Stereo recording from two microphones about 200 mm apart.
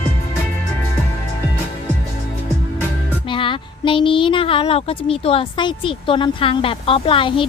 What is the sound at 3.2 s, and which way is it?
A woman's voice, 25° left (ahead or behind).